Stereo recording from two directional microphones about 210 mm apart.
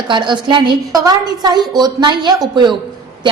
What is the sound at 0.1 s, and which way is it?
A woman's voice, 20° right (ahead or behind).